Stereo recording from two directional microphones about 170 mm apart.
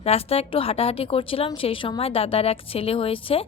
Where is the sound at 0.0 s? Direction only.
35° left (ahead or behind).